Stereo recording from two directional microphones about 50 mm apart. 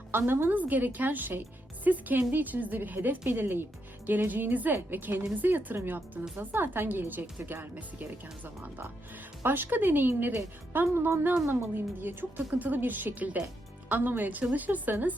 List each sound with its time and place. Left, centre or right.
0.1 s a woman's voice: right
0.5 s a woman's voice: right
9.4 s a woman's voice: right